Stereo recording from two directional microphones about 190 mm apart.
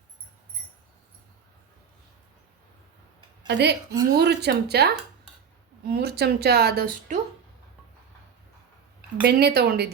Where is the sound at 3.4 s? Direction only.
60° right (ahead or behind).